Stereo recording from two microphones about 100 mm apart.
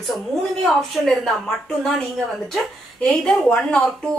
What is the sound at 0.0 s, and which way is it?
A woman's voice, centre (ahead or behind).